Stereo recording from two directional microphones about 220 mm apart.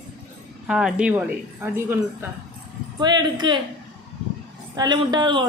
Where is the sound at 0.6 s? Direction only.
5° right (ahead or behind); by 3.6 s 20° right (ahead or behind).